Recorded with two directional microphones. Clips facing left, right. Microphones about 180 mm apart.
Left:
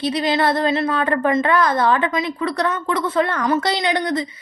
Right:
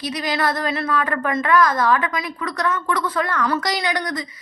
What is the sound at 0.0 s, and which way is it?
A woman's voice, 30° left (ahead or behind).